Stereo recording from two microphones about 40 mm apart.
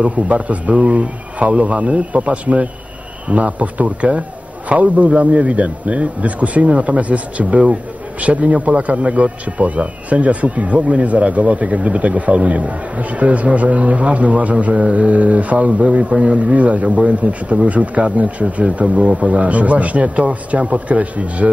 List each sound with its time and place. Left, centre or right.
0.0 s a man's voice: right
18.4 s speech: right
19.2 s a man's voice: right